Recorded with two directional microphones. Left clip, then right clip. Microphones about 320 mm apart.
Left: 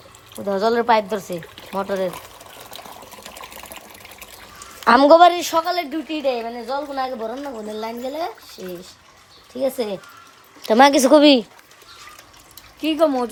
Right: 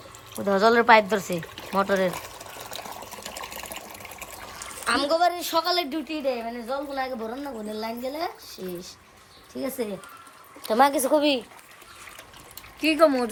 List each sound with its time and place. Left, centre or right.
0.3 s pour: centre
4.9 s speech: left
5.5 s a woman's voice: centre
9.5 s a woman's voice: centre
10.6 s speech: left
12.8 s speech: centre